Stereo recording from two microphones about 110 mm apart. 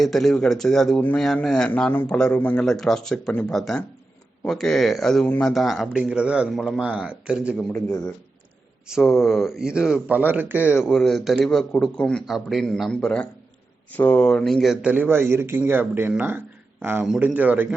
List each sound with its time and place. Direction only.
0.0 s speech: 5° left (ahead or behind)
8.9 s speech: centre (ahead or behind)
10.6 s speech: 20° left (ahead or behind)
10.8 s speech: centre (ahead or behind); by 17.7 s 15° right (ahead or behind)